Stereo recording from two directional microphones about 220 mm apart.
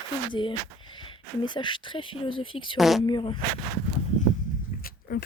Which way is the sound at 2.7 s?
Centre (ahead or behind).